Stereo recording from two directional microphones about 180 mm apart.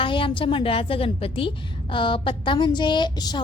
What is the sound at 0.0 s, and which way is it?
A woman's voice, 30° left (ahead or behind).